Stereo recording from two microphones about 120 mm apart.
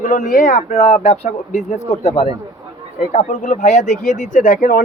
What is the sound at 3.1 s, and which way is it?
Speech, 80° left.